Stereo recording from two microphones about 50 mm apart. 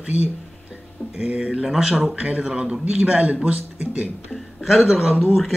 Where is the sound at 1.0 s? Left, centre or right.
Left.